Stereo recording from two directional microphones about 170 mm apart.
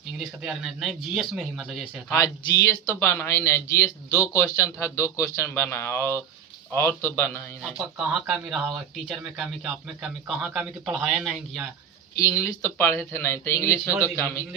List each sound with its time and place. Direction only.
0.4 s a man's voice: centre (ahead or behind)
2.1 s speech: 15° left (ahead or behind)
7.6 s a man's voice: 5° right (ahead or behind)
12.1 s speech: 10° left (ahead or behind)
13.7 s a man's voice: 10° right (ahead or behind)